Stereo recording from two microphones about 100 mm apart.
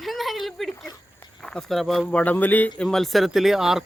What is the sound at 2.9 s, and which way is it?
Speech, 5° left (ahead or behind).